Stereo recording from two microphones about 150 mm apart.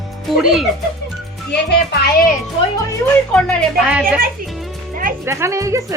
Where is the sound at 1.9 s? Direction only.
90° left.